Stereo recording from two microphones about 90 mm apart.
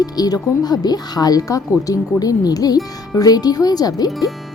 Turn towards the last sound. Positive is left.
turn(degrees=0)  # may be behind; listen again after turning